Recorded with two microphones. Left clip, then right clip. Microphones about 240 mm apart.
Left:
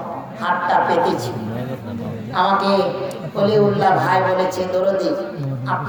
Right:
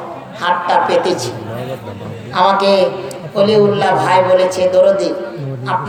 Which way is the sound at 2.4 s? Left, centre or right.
Centre.